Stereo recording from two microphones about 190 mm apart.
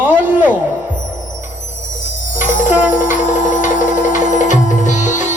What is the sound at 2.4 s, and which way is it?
Music, 40° left (ahead or behind).